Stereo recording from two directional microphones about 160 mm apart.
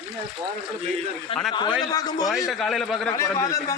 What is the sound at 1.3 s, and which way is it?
Speech, 35° left (ahead or behind).